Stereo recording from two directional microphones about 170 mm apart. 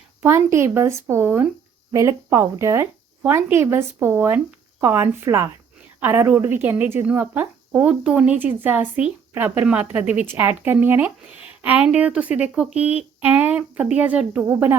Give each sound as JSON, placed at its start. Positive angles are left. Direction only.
{"t": 0.2, "sound": "speech", "side_deg": -15}
{"t": 12.7, "sound": "speech", "side_deg": 40}
{"t": 13.2, "sound": "speech", "side_deg": -10}